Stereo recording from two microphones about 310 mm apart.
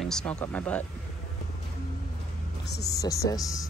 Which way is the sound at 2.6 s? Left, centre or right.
Left.